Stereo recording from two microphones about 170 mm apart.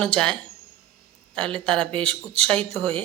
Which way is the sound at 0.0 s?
5° left (ahead or behind).